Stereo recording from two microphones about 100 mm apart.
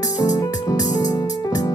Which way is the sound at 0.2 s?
35° left (ahead or behind).